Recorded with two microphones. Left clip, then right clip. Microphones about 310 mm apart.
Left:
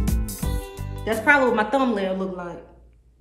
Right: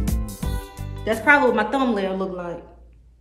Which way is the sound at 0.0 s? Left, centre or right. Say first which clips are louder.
Even; centre.